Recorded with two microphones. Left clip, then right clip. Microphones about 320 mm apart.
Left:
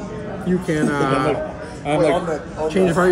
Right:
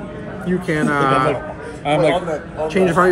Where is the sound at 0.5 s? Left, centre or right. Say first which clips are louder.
Right 2 dB; centre.